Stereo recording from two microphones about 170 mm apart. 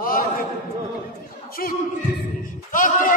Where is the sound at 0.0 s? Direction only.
55° left (ahead or behind).